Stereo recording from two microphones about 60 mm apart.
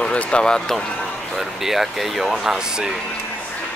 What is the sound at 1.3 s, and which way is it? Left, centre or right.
Speech, centre.